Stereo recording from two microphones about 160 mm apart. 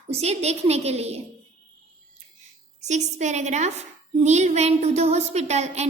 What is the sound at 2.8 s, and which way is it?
A woman's voice, 45° right (ahead or behind).